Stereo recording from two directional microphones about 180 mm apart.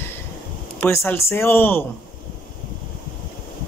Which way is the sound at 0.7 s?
15° left (ahead or behind).